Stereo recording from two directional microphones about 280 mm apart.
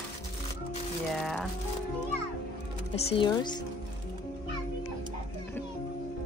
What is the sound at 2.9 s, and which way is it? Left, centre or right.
Speech, centre.